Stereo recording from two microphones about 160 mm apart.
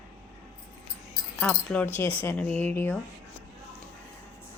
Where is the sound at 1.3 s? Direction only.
10° left (ahead or behind).